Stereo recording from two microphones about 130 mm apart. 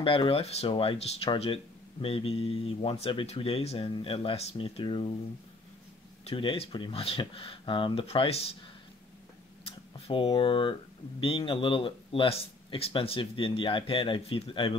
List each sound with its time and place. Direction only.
0.0 s speech: 45° left (ahead or behind)
6.2 s speech: 45° left (ahead or behind)
9.7 s speech: 45° left (ahead or behind)